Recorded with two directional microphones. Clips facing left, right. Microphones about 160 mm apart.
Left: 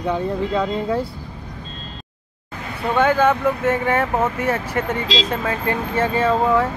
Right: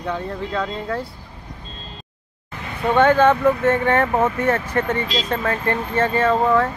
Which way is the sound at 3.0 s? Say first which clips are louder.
Right 2 dB; 10° left (ahead or behind).